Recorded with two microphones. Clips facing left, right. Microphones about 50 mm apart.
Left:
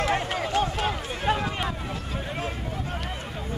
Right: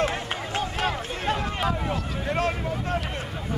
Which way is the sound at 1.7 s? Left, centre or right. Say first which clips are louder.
Right 5 dB; right.